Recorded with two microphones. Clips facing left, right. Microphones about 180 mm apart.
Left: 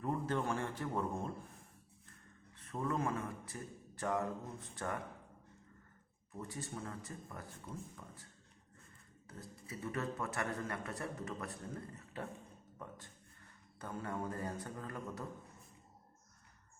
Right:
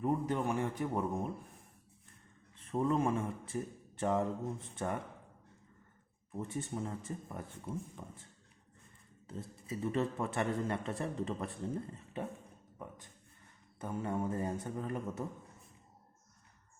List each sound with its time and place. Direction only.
0.0 s a man's voice: 15° right (ahead or behind)
2.6 s a sound: 25° right (ahead or behind)
4.7 s a man's voice: 25° right (ahead or behind)
6.3 s a man's voice: 25° right (ahead or behind)
13.7 s a man's voice: 20° right (ahead or behind)